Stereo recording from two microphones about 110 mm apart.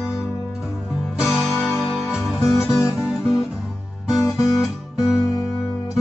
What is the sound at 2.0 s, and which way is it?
Music, centre (ahead or behind).